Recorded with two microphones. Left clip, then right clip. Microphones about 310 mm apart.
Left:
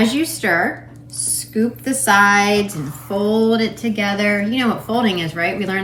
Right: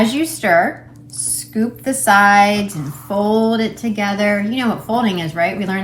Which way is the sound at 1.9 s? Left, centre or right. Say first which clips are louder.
Right 2 dB; centre.